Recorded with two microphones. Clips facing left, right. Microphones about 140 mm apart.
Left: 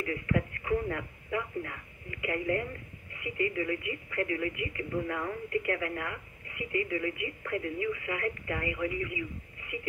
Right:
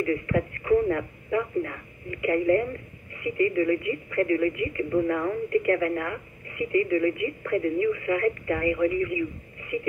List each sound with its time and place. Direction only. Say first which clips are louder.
0.0 s speech: right 6 dB; 45° right (ahead or behind)